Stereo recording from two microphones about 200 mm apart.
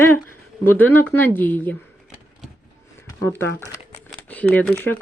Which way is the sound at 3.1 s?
10° left (ahead or behind).